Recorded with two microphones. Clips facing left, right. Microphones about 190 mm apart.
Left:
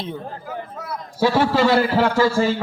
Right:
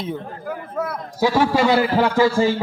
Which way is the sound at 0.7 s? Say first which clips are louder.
Right 6 dB; 55° right (ahead or behind).